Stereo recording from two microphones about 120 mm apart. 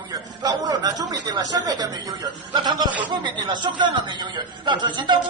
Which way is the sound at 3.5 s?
40° right (ahead or behind).